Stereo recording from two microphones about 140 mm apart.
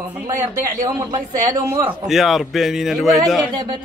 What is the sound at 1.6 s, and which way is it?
Speech, 15° right (ahead or behind).